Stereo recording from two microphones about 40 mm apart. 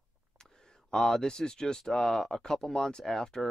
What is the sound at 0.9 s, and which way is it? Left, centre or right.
Speech, centre.